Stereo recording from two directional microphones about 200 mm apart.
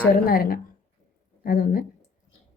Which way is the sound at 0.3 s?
45° left (ahead or behind).